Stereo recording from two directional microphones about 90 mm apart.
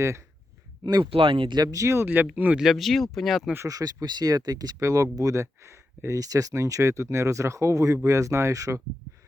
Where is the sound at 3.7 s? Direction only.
45° right (ahead or behind).